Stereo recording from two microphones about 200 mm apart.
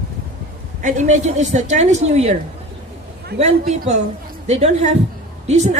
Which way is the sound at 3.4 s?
35° right (ahead or behind).